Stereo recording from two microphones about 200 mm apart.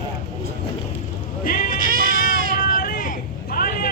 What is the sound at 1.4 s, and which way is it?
Bleat, 45° left (ahead or behind).